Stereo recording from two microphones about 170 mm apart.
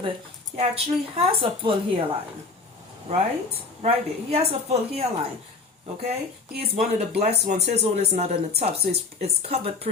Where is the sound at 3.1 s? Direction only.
40° right (ahead or behind).